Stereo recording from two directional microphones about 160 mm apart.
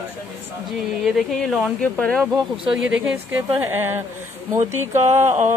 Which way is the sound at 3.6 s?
15° right (ahead or behind).